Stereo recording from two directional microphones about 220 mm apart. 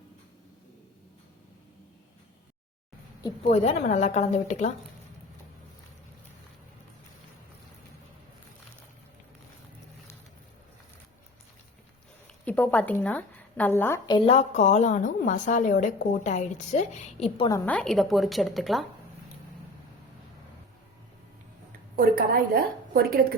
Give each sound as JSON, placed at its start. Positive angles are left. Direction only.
{"t": 3.5, "sound": "a woman's voice", "side_deg": 30}
{"t": 12.5, "sound": "a woman's voice", "side_deg": 5}
{"t": 14.3, "sound": "a woman's voice", "side_deg": 30}
{"t": 17.7, "sound": "a woman's voice", "side_deg": 0}
{"t": 21.9, "sound": "a sound", "side_deg": -40}